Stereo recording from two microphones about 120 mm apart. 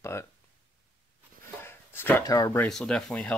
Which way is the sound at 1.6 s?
20° left (ahead or behind).